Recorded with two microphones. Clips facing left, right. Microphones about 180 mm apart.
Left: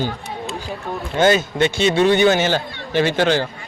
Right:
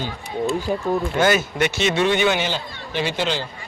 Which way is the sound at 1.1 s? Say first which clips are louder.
Left 6 dB; 25° left (ahead or behind).